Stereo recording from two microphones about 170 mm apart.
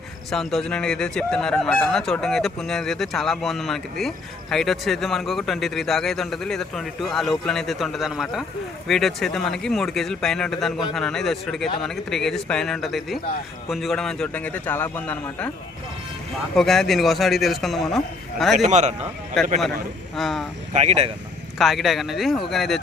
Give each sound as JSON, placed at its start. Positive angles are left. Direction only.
{"t": 0.3, "sound": "a man's voice", "side_deg": 0}
{"t": 16.6, "sound": "speech", "side_deg": 0}
{"t": 18.7, "sound": "a man's voice", "side_deg": -40}
{"t": 19.4, "sound": "speech", "side_deg": 0}
{"t": 20.7, "sound": "a man's voice", "side_deg": -40}
{"t": 21.6, "sound": "speech", "side_deg": 0}